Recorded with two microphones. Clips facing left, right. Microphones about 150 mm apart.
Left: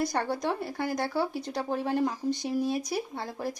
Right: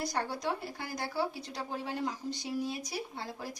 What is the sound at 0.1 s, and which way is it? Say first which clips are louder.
Speech: left 5 dB; 55° left (ahead or behind).